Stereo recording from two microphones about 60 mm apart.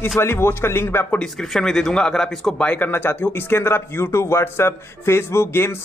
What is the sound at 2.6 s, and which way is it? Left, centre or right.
Speech, left.